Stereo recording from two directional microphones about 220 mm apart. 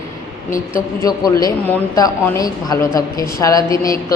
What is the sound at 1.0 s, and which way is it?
Speech, 15° left (ahead or behind).